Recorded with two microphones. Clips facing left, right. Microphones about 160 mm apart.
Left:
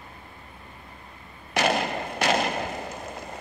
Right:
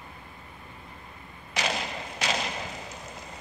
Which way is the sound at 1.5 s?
55° left (ahead or behind).